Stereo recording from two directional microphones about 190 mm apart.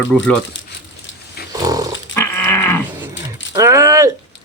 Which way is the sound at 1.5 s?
20° right (ahead or behind).